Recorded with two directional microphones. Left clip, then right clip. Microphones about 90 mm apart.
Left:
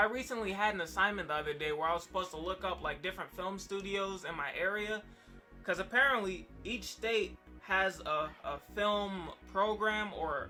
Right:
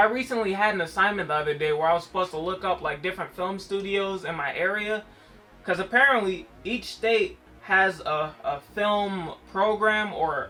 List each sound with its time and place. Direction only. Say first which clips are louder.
0.0 s speech: right 10 dB; 35° left (ahead or behind)